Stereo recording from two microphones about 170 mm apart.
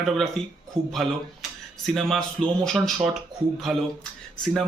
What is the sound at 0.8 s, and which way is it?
Speech, 30° right (ahead or behind).